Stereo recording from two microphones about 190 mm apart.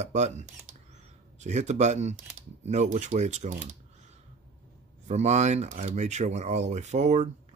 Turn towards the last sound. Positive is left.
turn(degrees=-40)  # may be behind; listen again after turning